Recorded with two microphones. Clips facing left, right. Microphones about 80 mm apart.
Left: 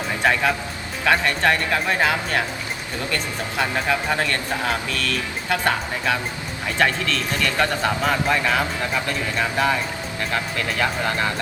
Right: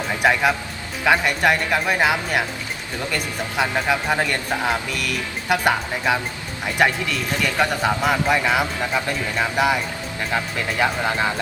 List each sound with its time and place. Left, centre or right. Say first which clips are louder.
0.2 s speech: right 2 dB; centre
3.6 s speech: right 1 dB; centre